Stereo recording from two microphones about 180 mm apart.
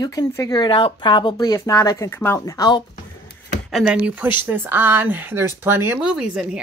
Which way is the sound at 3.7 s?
5° right (ahead or behind).